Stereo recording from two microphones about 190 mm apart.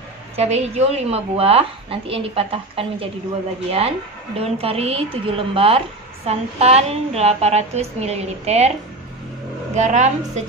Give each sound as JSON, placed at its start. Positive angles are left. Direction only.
{"t": 0.4, "sound": "a woman's voice", "side_deg": -35}
{"t": 4.4, "sound": "a woman's voice", "side_deg": -30}
{"t": 9.8, "sound": "a woman's voice", "side_deg": -40}